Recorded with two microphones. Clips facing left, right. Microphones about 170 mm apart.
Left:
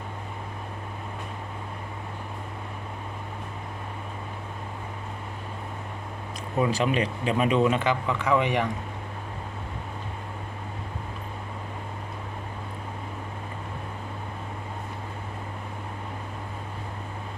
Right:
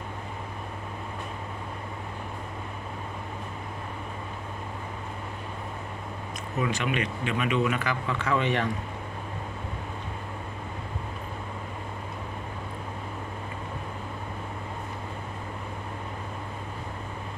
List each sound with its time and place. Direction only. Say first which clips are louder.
6.6 s speech: left 4 dB; 35° left (ahead or behind); by 8.7 s 15° left (ahead or behind)